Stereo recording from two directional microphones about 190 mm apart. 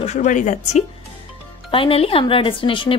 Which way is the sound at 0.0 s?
40° left (ahead or behind).